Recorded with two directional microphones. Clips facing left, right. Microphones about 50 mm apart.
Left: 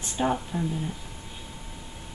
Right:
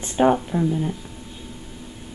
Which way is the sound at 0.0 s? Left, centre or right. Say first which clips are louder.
Right 8 dB; right.